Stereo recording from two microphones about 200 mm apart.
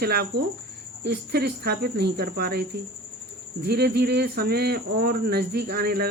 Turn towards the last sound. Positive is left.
turn(degrees=-50)  # may be behind; listen again after turning